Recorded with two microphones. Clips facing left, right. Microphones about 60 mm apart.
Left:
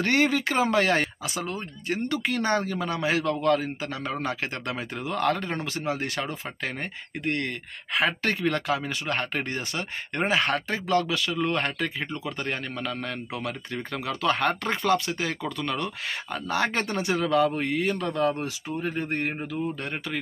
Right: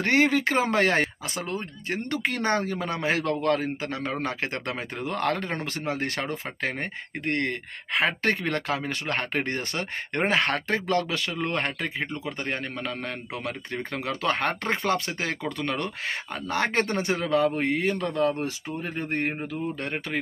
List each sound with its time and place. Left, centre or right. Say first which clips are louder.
0.0 s speech: right 1 dB; right